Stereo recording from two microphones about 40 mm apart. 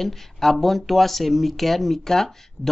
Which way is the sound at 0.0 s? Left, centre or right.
Centre.